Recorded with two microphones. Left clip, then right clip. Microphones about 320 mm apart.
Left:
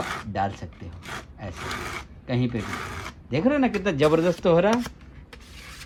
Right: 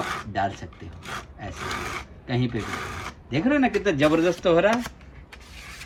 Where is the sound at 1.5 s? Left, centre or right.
Centre.